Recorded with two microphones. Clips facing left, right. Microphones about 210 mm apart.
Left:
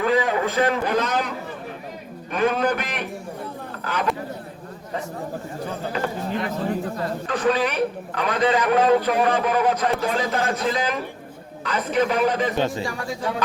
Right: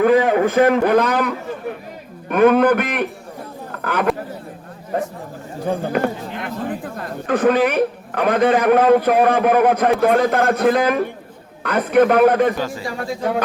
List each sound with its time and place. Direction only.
0.0 s a man's voice: 55° right (ahead or behind)
2.3 s a man's voice: 60° right (ahead or behind)
12.5 s a man's voice: 25° left (ahead or behind)